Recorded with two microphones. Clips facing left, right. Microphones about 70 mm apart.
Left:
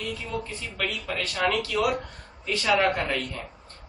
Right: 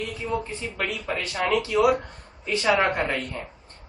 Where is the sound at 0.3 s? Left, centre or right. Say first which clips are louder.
Right 4 dB; right.